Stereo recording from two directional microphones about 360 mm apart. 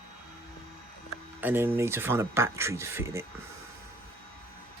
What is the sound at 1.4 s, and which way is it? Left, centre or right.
Speech, centre.